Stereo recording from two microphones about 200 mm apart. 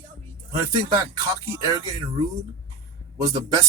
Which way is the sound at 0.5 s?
15° right (ahead or behind).